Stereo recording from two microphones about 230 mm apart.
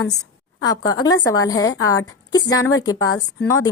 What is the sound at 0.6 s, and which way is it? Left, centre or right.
A woman's voice, centre.